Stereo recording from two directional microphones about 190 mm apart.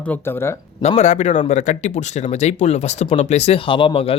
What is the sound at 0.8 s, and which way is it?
Speech, 35° left (ahead or behind).